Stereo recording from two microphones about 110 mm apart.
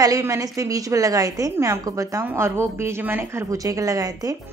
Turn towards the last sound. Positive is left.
turn(degrees=-30)  # may be behind; listen again after turning